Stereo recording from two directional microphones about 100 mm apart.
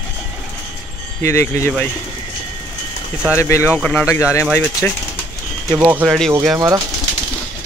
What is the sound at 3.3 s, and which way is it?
Speech, 25° left (ahead or behind).